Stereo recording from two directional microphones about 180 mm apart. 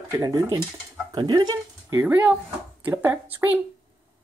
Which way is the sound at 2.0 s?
10° right (ahead or behind).